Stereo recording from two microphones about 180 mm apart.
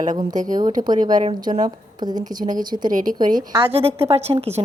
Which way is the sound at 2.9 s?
50° right (ahead or behind).